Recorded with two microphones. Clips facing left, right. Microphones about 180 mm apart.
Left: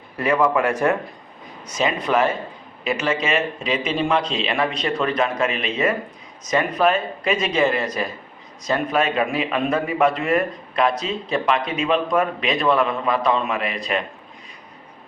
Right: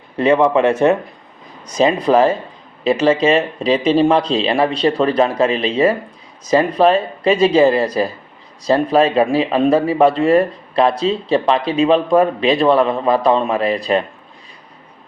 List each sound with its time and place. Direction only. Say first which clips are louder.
0.2 s a man's voice: right 6 dB; 25° right (ahead or behind)